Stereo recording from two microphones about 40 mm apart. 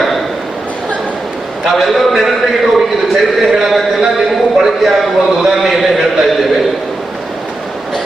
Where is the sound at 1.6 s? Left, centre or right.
Centre.